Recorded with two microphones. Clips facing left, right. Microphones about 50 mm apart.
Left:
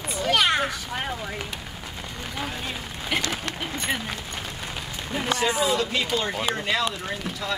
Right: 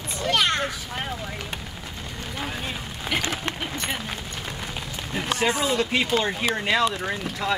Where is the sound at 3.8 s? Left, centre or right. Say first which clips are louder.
Left 1 dB; centre.